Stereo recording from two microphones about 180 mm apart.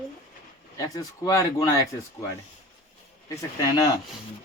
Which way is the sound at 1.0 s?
20° left (ahead or behind).